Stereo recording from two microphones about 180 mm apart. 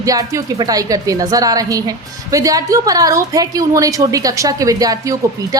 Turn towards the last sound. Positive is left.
turn(degrees=-20)  # may be behind; listen again after turning